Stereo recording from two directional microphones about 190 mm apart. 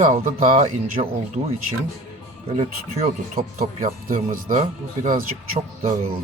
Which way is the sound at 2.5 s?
35° right (ahead or behind).